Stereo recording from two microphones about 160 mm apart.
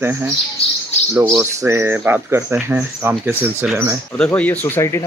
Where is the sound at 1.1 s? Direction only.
15° right (ahead or behind).